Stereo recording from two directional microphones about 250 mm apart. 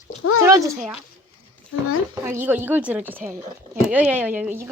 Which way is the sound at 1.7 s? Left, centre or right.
Left.